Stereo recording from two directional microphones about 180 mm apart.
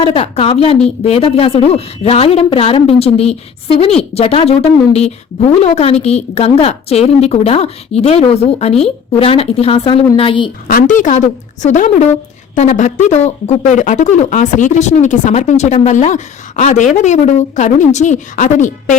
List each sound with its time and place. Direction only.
0.0 s a woman's voice: 30° left (ahead or behind)
10.7 s a woman's voice: 50° left (ahead or behind)